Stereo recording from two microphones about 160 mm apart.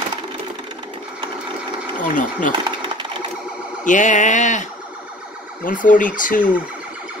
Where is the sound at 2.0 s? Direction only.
55° left (ahead or behind).